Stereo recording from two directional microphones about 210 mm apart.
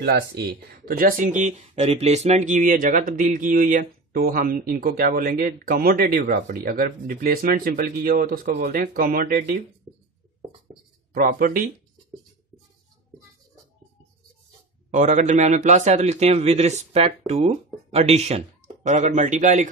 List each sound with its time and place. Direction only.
0.0 s speech: 50° right (ahead or behind)
11.1 s speech: 40° right (ahead or behind)
14.9 s speech: 35° right (ahead or behind)